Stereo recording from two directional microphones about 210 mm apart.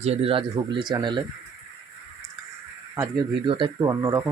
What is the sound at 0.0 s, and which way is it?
Speech, 30° right (ahead or behind).